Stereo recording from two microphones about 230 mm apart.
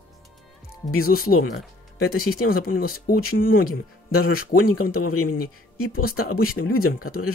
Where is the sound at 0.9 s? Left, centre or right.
Left.